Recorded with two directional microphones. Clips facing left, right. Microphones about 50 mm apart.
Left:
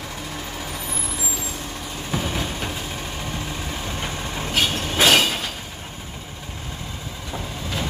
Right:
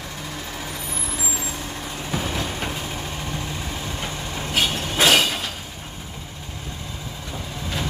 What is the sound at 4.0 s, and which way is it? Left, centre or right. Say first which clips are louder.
Train: left 1 dB; centre.